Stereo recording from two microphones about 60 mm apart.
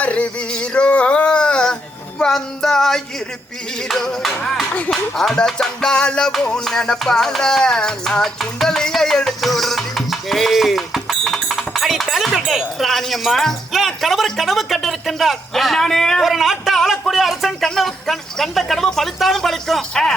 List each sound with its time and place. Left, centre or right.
0.0 s a sound: left
2.1 s music: centre
11.3 s speech: centre
16.2 s speech: centre
19.9 s music: centre